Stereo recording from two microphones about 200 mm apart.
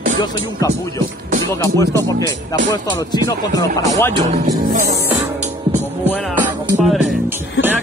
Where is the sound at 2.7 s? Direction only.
20° left (ahead or behind).